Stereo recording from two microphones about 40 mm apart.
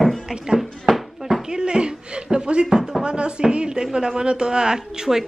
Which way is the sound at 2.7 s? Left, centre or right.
Centre.